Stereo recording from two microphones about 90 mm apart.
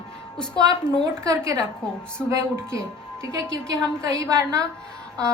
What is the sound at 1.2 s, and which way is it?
Speech, 40° right (ahead or behind).